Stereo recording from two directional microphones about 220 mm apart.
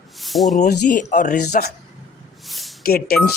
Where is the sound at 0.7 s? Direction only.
35° left (ahead or behind).